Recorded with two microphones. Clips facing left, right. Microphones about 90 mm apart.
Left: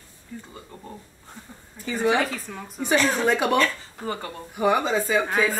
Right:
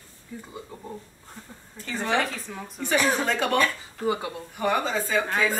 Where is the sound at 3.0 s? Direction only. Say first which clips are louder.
Even; 10° right (ahead or behind).